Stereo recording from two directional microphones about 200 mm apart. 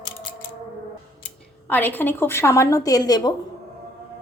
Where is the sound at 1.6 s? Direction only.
10° left (ahead or behind).